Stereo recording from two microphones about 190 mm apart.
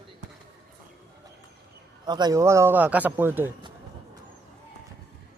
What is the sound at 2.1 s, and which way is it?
Speech, 20° right (ahead or behind).